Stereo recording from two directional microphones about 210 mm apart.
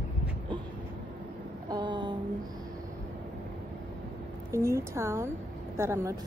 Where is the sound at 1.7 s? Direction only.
20° right (ahead or behind).